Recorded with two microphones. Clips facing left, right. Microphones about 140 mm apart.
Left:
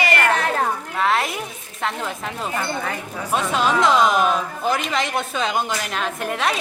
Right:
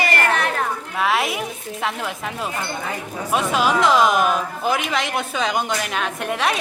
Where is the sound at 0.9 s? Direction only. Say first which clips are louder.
Right 1 dB; 5° right (ahead or behind).